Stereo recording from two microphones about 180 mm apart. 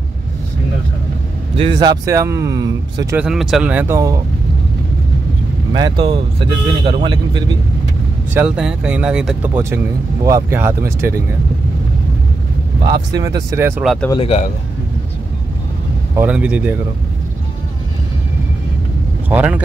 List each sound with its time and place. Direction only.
1.6 s speech: 25° right (ahead or behind)
3.2 s speech: 5° right (ahead or behind)
5.7 s speech: 25° right (ahead or behind)
8.4 s speech: 5° right (ahead or behind)
12.9 s speech: 20° right (ahead or behind)
14.1 s a man's voice: 35° left (ahead or behind)
16.2 s speech: 5° right (ahead or behind)
19.2 s speech: 10° right (ahead or behind)